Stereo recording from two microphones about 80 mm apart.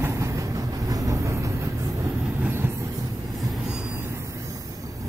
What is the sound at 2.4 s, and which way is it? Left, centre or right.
Train, right.